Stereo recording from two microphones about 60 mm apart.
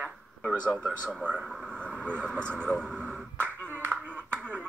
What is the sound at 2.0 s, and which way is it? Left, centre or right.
Speech, right.